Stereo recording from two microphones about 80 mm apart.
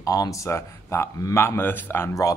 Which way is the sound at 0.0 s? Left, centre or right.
Left.